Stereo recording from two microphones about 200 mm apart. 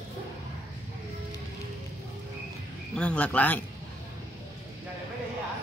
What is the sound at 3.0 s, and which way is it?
Speech, 5° left (ahead or behind).